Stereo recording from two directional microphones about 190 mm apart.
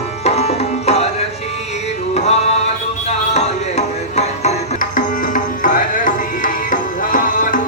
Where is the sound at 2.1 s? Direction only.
35° left (ahead or behind).